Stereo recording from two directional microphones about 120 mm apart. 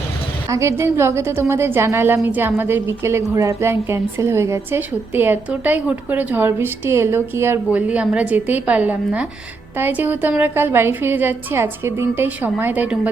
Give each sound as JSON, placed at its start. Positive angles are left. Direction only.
{"t": 0.4, "sound": "a woman's voice", "side_deg": -25}